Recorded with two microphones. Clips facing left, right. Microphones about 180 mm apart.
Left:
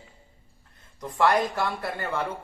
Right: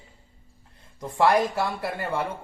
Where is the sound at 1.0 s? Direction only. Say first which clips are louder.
Right 1 dB; 25° right (ahead or behind).